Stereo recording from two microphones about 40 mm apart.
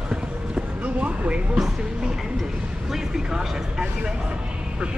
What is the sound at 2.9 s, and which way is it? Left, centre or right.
Vehicle, centre.